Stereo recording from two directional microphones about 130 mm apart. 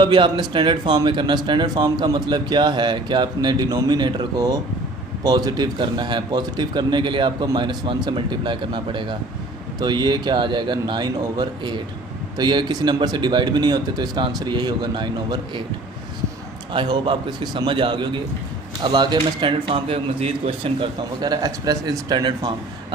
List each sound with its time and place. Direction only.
0.0 s speech: 35° right (ahead or behind)
16.7 s speech: 35° right (ahead or behind)
20.7 s speech: 30° right (ahead or behind)